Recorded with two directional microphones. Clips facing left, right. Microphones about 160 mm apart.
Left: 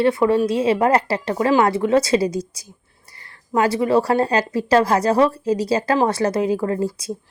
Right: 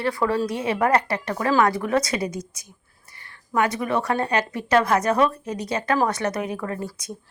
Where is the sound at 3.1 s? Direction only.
35° left (ahead or behind).